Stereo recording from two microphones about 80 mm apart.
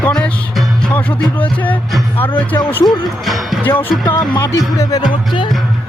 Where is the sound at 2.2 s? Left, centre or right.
Left.